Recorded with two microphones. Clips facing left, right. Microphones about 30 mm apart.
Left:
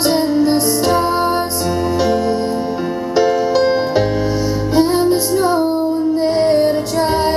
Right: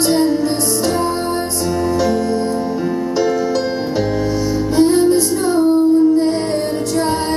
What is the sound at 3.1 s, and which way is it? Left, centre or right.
Music, centre.